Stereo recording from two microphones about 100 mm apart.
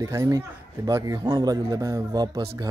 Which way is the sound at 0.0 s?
35° right (ahead or behind).